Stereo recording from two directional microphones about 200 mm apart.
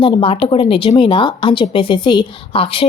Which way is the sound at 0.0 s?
25° left (ahead or behind).